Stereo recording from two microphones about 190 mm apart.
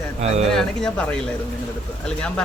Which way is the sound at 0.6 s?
5° left (ahead or behind).